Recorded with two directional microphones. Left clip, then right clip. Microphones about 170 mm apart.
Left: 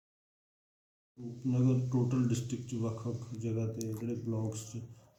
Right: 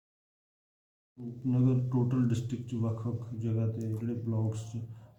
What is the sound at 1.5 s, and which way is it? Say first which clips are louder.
Speech: right 2 dB; 10° right (ahead or behind).